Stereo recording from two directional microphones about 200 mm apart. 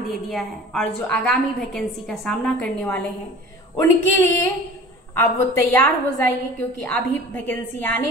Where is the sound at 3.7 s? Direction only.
15° left (ahead or behind).